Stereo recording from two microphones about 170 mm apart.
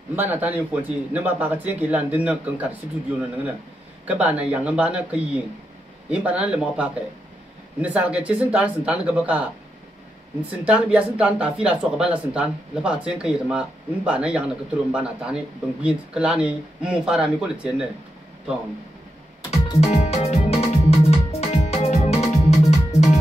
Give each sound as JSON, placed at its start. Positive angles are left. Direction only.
{"t": 0.1, "sound": "speech", "side_deg": -10}
{"t": 4.1, "sound": "speech", "side_deg": -10}
{"t": 10.5, "sound": "speech", "side_deg": -5}
{"t": 19.5, "sound": "music", "side_deg": 40}